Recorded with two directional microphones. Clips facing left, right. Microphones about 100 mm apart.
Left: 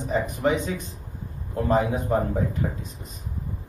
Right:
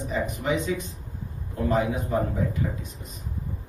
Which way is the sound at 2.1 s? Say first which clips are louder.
Left 3 dB; 40° left (ahead or behind).